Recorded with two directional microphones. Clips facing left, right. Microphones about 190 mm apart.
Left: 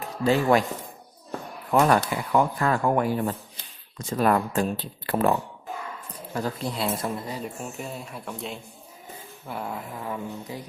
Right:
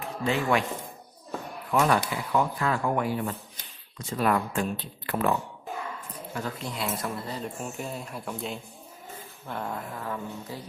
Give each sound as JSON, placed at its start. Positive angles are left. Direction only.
{"t": 0.0, "sound": "speech", "side_deg": 40}
{"t": 1.8, "sound": "speech", "side_deg": 45}
{"t": 6.3, "sound": "speech", "side_deg": 35}
{"t": 7.6, "sound": "speech", "side_deg": 0}